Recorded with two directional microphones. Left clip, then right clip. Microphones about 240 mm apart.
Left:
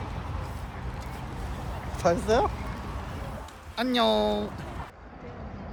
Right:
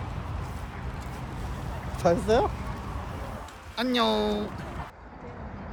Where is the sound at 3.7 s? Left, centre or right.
Centre.